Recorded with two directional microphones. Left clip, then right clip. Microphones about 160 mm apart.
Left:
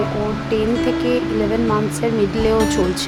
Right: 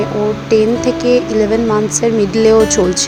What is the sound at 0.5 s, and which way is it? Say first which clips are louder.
Music: right 6 dB; 30° right (ahead or behind).